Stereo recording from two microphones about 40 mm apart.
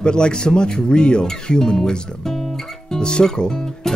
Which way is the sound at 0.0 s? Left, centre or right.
Left.